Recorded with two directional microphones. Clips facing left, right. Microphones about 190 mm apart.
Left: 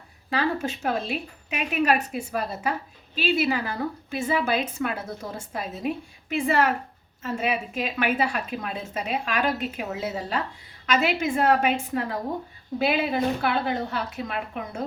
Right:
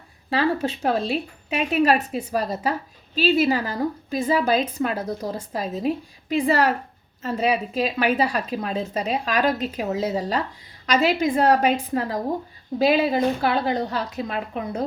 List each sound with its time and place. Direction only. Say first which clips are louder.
0.3 s a woman's voice: right 4 dB; 35° right (ahead or behind)